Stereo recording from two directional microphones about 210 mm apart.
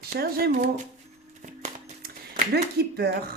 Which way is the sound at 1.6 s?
40° right (ahead or behind).